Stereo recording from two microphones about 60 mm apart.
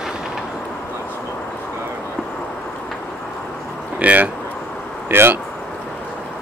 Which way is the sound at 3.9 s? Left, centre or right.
Right.